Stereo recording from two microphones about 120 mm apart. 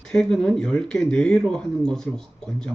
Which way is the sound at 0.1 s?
5° left (ahead or behind).